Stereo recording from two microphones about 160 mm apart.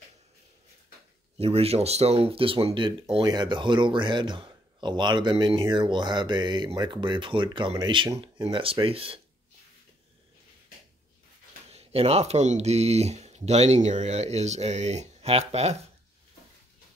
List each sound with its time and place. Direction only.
1.4 s speech: 40° right (ahead or behind)
11.7 s speech: 40° right (ahead or behind)